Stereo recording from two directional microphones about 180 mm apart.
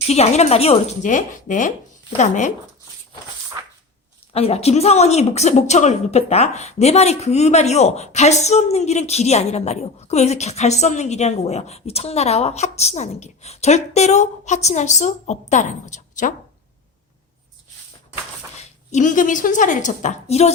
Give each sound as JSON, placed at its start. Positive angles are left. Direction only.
{"t": 0.1, "sound": "a woman's voice", "side_deg": 35}
{"t": 4.3, "sound": "a woman's voice", "side_deg": 35}
{"t": 18.9, "sound": "a woman's voice", "side_deg": 45}